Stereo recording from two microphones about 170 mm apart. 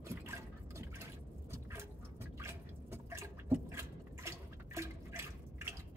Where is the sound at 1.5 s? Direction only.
15° right (ahead or behind).